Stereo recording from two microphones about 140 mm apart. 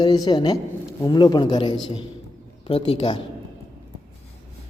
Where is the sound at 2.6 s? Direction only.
45° left (ahead or behind).